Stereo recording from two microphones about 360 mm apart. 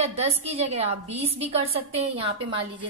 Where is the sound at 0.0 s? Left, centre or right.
Centre.